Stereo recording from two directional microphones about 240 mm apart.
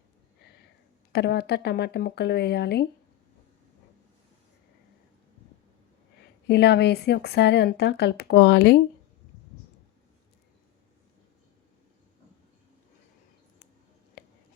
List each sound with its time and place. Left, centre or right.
1.1 s speech: left
6.5 s speech: left
14.2 s a sound: left